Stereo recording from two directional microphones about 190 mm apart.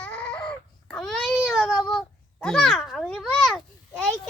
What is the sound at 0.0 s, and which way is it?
Baby cry, 5° left (ahead or behind).